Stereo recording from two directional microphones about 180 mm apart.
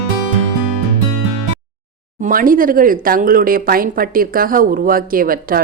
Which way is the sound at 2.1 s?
45° right (ahead or behind).